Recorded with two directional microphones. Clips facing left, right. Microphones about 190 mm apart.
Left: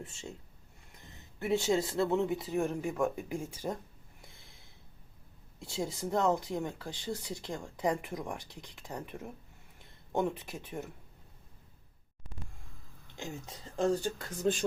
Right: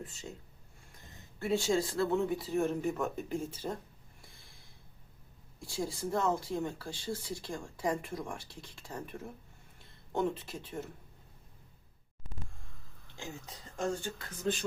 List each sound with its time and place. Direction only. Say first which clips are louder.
0.0 s speech: even; 25° left (ahead or behind)
1.4 s speech: left 1 dB; 20° left (ahead or behind)
4.4 s snort: left 1 dB; 20° left (ahead or behind)
5.5 s speech: left 1 dB; 20° left (ahead or behind)
13.1 s speech: left 3 dB; 20° left (ahead or behind)
13.7 s speech: left 5 dB; 40° left (ahead or behind)